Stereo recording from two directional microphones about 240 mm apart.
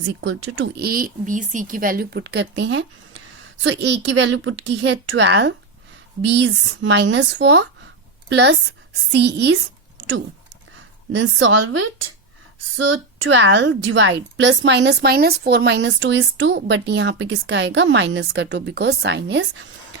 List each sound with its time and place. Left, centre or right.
0.5 s a woman's voice: right
11.1 s a woman's voice: right